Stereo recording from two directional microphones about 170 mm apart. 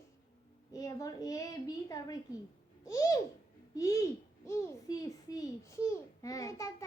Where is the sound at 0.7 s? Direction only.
20° left (ahead or behind).